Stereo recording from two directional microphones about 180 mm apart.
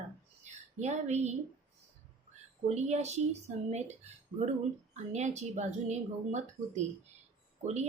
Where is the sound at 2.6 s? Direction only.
40° right (ahead or behind).